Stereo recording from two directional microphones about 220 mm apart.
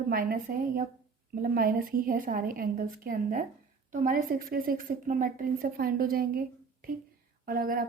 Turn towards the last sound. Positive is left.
turn(degrees=-40)  # may be behind; listen again after turning